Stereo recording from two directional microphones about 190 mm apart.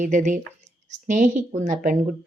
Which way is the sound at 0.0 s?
40° right (ahead or behind).